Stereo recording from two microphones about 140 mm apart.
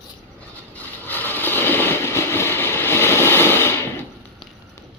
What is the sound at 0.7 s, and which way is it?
Vehicle, 15° left (ahead or behind).